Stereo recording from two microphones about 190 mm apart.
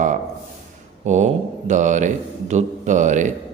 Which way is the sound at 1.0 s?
40° right (ahead or behind).